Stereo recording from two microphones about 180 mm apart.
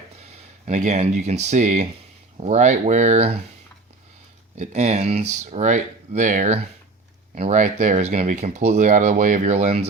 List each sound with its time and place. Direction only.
0.3 s speech: 40° right (ahead or behind)
4.5 s speech: 40° right (ahead or behind)